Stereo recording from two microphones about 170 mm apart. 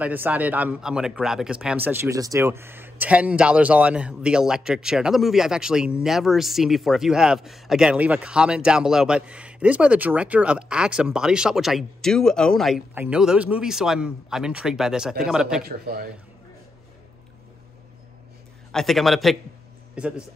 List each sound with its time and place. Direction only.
0.0 s speech: 10° right (ahead or behind)
15.6 s a man's voice: 65° right (ahead or behind)
18.7 s speech: centre (ahead or behind)